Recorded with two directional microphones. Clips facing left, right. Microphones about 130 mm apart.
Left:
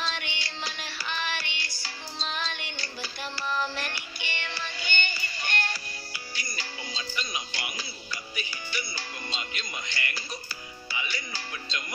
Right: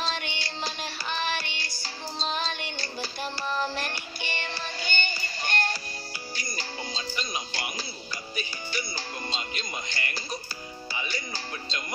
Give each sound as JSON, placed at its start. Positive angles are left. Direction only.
{"t": 0.0, "sound": "music", "side_deg": -40}